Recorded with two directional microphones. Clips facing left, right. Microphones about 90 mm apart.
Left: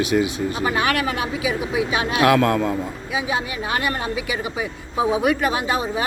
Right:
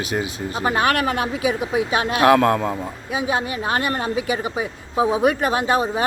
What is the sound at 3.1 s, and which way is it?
A woman's voice, 45° right (ahead or behind).